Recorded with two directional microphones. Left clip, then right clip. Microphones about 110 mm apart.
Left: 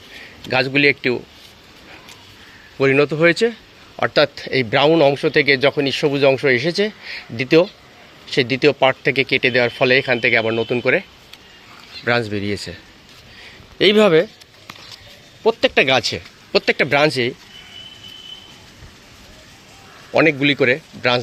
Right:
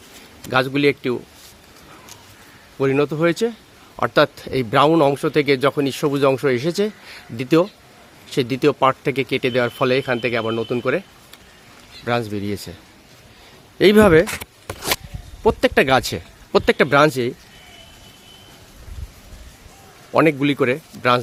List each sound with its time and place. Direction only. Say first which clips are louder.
0.5 s speech: left 2 dB; 25° right (ahead or behind)
2.7 s speech: left 4 dB; 15° right (ahead or behind)
4.1 s speech: even; 35° right (ahead or behind); by 11.0 s 15° right (ahead or behind)
12.0 s speech: left 3 dB; 20° right (ahead or behind)
13.7 s speech: even; 65° right (ahead or behind)
15.4 s speech: left 1 dB; 85° right; by 16.7 s 60° right (ahead or behind)
16.7 s speech: right 2 dB; 35° right (ahead or behind)
20.1 s speech: left 2 dB; 30° right (ahead or behind)